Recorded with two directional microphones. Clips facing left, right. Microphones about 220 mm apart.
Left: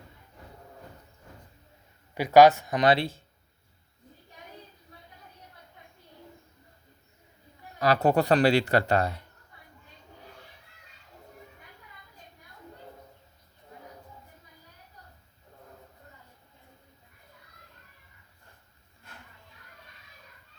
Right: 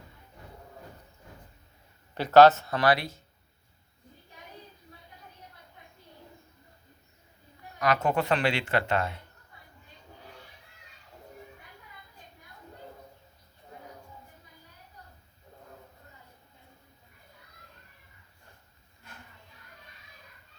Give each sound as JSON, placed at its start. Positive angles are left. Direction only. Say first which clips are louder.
{"t": 2.1, "sound": "speech", "louder": "even", "side_deg": 10}
{"t": 7.8, "sound": "speech", "louder": "left 4 dB", "side_deg": 35}